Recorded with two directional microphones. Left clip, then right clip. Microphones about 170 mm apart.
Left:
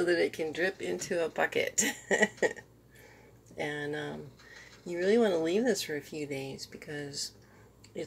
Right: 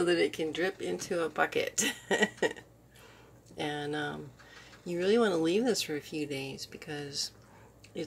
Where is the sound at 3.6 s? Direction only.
10° right (ahead or behind).